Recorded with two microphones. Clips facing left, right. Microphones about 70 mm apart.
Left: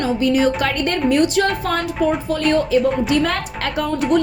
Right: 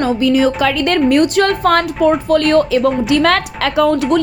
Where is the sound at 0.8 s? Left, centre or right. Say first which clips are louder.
Right 4 dB; right.